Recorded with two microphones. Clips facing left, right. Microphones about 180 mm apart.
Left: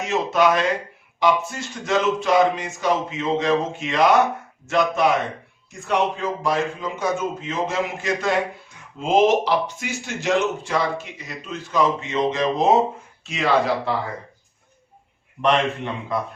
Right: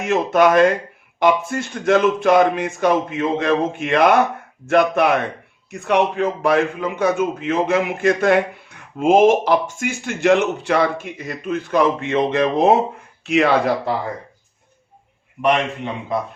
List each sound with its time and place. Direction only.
0.0 s speech: 55° right (ahead or behind)
15.4 s a man's voice: 10° right (ahead or behind)